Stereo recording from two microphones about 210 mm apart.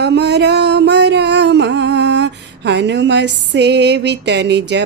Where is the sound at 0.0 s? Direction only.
55° right (ahead or behind).